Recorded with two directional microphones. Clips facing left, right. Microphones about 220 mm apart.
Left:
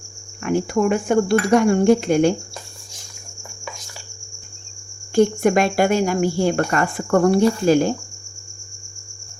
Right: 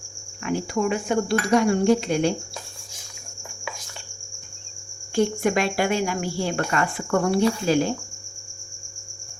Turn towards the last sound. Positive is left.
turn(degrees=45)  # may be behind; listen again after turning